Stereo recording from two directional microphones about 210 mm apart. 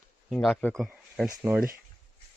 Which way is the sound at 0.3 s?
Centre (ahead or behind).